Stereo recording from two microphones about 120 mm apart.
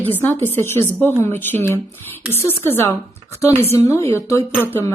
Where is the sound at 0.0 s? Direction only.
15° left (ahead or behind).